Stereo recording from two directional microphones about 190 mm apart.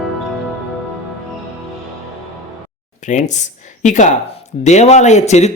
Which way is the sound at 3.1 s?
40° left (ahead or behind).